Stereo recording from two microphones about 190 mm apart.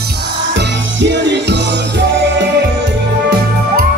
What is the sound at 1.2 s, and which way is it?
Music, 65° right (ahead or behind).